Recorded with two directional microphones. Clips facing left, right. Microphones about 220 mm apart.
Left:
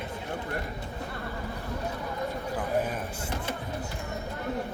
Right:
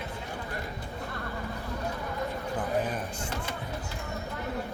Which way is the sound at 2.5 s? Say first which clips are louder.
Even; 5° left (ahead or behind).